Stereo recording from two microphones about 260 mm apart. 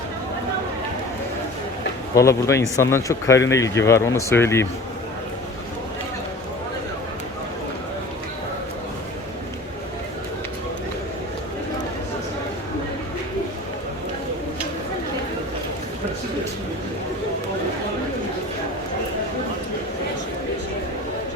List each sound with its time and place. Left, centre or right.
2.1 s speech: centre